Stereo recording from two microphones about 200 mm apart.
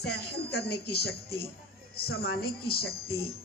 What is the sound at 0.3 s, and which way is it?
A woman's voice, 55° left (ahead or behind).